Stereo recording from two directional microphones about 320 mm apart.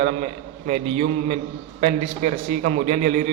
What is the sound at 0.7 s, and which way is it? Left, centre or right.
A man's voice, right.